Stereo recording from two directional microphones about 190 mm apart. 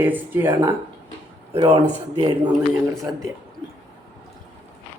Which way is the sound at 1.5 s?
30° right (ahead or behind).